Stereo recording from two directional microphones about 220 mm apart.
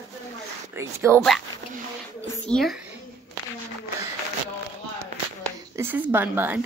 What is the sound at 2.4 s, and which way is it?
Speech, centre (ahead or behind).